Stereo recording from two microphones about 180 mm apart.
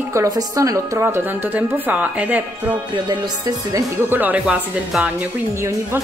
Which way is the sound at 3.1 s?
20° right (ahead or behind).